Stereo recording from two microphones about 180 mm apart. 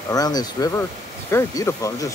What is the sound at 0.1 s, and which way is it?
Speech, 20° left (ahead or behind).